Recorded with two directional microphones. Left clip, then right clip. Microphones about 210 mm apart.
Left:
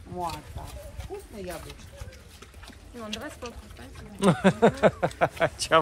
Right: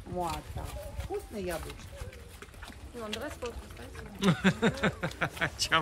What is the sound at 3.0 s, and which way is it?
Speech, 10° right (ahead or behind).